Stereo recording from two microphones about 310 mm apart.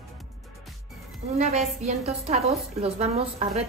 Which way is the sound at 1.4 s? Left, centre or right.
Centre.